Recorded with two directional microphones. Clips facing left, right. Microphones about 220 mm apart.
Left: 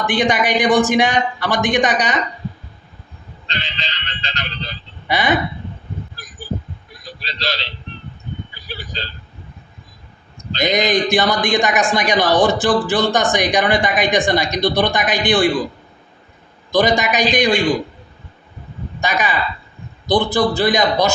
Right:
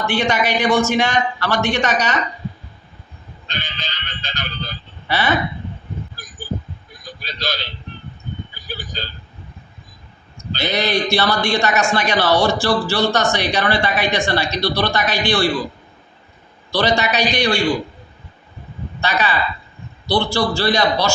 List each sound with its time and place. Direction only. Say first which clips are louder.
0.0 s speech: left 2 dB; 15° left (ahead or behind)
3.5 s speech: left 2 dB; centre (ahead or behind)
5.0 s speech: left 1 dB; 15° left (ahead or behind)
7.0 s a sound: left 1 dB; centre (ahead or behind)
10.6 s speech: left 3 dB; 15° left (ahead or behind)
16.7 s speech: left 2 dB; 15° left (ahead or behind)
18.9 s speech: even; 15° left (ahead or behind)